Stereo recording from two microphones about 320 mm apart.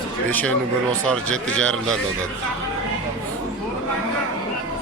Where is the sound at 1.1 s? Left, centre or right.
Centre.